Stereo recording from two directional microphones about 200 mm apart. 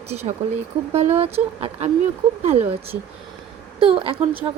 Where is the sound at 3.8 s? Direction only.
25° right (ahead or behind).